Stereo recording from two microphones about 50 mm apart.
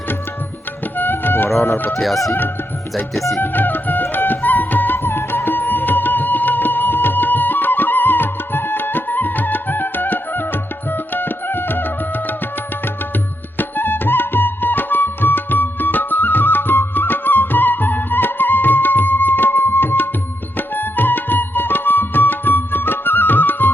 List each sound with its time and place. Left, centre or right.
0.9 s music: left
2.0 s speech: centre
3.4 s music: left
13.6 s music: left